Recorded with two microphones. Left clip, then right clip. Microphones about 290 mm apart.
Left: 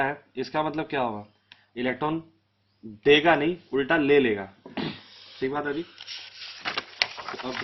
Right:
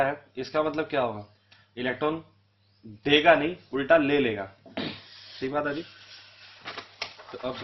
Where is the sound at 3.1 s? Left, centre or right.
Centre.